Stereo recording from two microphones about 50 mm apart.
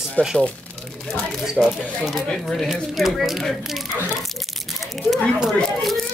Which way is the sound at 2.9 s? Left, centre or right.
Centre.